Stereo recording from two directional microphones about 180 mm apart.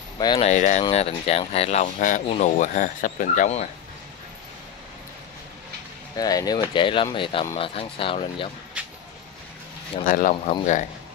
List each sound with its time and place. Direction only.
0.2 s speech: 25° left (ahead or behind)
0.5 s speech: 40° left (ahead or behind)
6.1 s speech: 20° left (ahead or behind)
8.8 s vehicle: 5° right (ahead or behind)
10.0 s speech: 50° left (ahead or behind)